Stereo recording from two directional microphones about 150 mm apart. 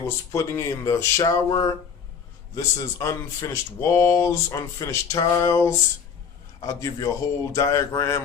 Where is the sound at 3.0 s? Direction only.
20° left (ahead or behind).